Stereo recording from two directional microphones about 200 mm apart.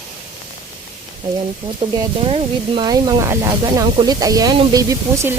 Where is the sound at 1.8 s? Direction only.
25° right (ahead or behind).